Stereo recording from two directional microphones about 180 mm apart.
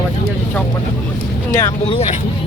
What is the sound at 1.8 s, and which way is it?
Speech, 35° left (ahead or behind).